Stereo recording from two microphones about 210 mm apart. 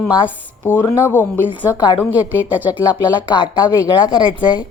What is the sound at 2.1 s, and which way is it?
Speech, 10° right (ahead or behind).